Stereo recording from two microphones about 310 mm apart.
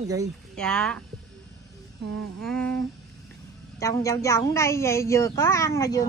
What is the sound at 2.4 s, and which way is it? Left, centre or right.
Speech, centre.